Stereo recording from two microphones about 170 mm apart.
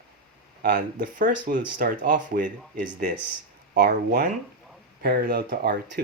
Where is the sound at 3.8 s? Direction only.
70° right (ahead or behind).